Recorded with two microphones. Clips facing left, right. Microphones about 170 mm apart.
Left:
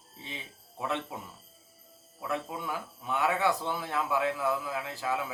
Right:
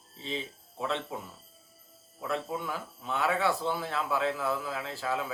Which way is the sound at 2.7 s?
15° left (ahead or behind).